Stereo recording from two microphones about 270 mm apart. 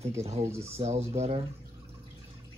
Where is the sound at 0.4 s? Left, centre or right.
Centre.